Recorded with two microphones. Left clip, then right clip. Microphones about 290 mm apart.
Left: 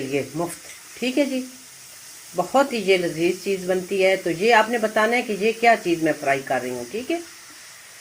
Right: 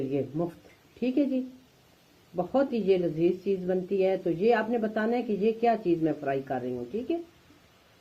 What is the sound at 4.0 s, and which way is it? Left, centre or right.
Speech, centre.